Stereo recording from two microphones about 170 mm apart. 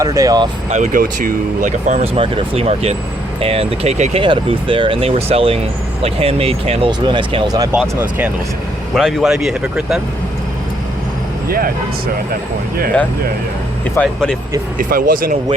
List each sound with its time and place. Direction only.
0.0 s speech: 20° right (ahead or behind)
0.7 s speech: 50° right (ahead or behind)
2.1 s speech: 35° right (ahead or behind)
4.2 s speech: 30° right (ahead or behind)
7.7 s speech: 10° right (ahead or behind)
11.4 s speech: 60° right (ahead or behind)
13.8 s speech: 5° left (ahead or behind)
14.8 s speech: 55° right (ahead or behind)